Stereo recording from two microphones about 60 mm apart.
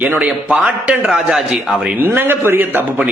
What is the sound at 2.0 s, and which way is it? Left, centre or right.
A man's voice, right.